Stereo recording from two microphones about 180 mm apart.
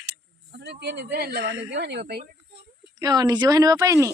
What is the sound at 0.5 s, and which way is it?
Speech, 70° right (ahead or behind).